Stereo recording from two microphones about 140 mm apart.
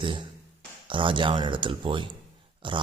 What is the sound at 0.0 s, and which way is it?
Speech, 35° right (ahead or behind).